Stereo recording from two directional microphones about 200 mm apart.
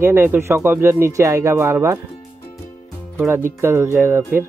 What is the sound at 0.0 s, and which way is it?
Speech, 10° right (ahead or behind).